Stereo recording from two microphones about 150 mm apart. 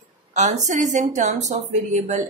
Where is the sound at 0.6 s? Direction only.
55° right (ahead or behind).